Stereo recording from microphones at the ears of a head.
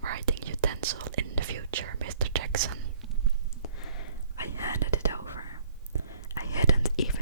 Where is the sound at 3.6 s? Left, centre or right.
Left.